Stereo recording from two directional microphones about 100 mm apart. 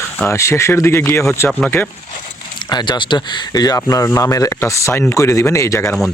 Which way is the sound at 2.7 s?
50° left (ahead or behind).